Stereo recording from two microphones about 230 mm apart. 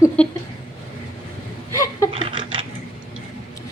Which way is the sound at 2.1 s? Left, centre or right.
Right.